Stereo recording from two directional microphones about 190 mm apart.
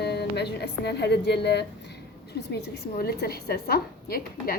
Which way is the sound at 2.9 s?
55° left (ahead or behind).